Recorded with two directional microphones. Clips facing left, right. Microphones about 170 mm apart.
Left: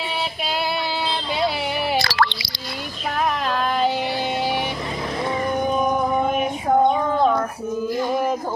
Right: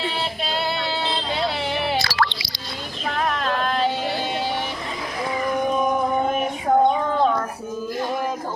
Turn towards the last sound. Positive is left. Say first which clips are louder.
# left 1 dB
turn(degrees=0)  # may be behind; listen again after turning